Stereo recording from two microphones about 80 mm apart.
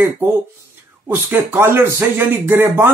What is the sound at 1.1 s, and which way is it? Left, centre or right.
Speech, right.